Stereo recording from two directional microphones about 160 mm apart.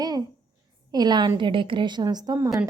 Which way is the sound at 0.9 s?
25° right (ahead or behind).